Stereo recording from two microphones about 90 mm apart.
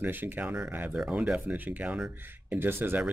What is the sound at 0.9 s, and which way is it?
Speech, 10° right (ahead or behind).